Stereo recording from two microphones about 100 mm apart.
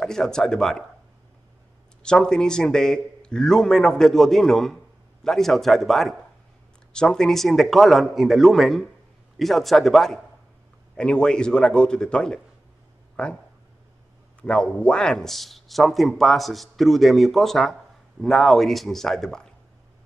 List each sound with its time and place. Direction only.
0.0 s speech: 5° left (ahead or behind)
2.0 s a man's voice: 5° left (ahead or behind)
14.4 s speech: 10° left (ahead or behind)